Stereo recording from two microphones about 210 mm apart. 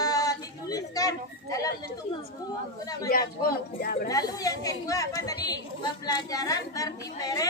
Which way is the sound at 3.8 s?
45° left (ahead or behind).